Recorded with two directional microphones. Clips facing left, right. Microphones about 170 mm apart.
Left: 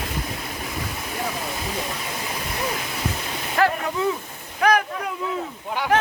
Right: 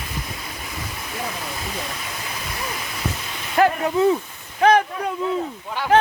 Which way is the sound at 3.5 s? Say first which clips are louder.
Right 4 dB; 25° right (ahead or behind).